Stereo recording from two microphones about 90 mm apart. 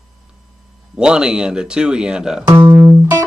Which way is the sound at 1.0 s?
10° right (ahead or behind).